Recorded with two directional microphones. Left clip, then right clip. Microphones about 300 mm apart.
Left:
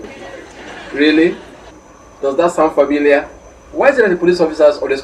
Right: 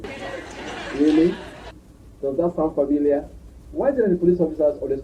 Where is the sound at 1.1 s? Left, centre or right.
Centre.